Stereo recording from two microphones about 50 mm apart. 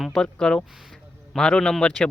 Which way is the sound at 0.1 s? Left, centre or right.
Centre.